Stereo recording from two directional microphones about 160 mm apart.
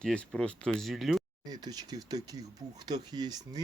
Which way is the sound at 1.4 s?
25° right (ahead or behind).